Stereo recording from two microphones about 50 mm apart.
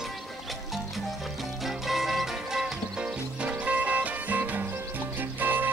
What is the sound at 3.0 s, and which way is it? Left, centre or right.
Music, right.